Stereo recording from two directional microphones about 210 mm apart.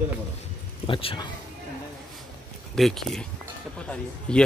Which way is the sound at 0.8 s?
25° left (ahead or behind).